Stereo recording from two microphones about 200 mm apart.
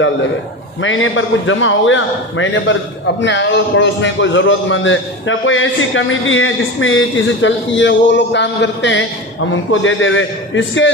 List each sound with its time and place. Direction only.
0.8 s a man's voice: 75° left (ahead or behind)
9.5 s a man's voice: 75° left (ahead or behind)